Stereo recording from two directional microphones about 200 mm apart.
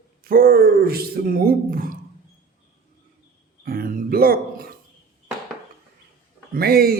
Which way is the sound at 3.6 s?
45° right (ahead or behind).